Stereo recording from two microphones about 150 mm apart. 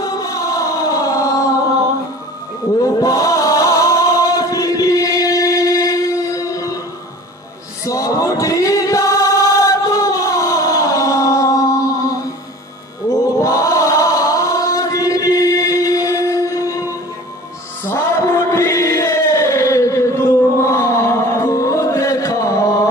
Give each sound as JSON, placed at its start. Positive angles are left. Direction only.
{"t": 0.0, "sound": "music", "side_deg": 25}
{"t": 2.8, "sound": "music", "side_deg": 25}
{"t": 7.9, "sound": "choir", "side_deg": 20}
{"t": 13.4, "sound": "chant", "side_deg": 20}
{"t": 17.8, "sound": "chant", "side_deg": 15}